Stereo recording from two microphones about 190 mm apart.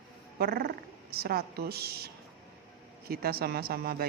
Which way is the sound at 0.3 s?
55° right (ahead or behind).